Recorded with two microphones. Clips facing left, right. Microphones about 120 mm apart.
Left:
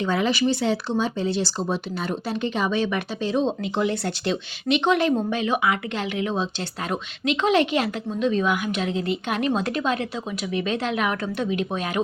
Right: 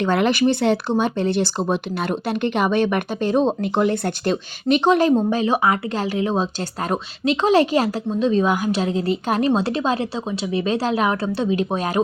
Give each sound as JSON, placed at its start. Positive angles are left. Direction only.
{"t": 0.0, "sound": "speech", "side_deg": -65}
{"t": 4.8, "sound": "speech", "side_deg": -35}